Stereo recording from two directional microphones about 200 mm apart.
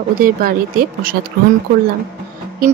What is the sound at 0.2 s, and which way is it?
Speech, 45° right (ahead or behind).